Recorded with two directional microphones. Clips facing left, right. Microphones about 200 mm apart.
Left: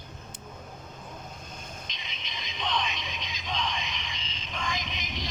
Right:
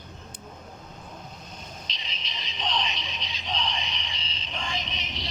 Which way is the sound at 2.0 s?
35° right (ahead or behind).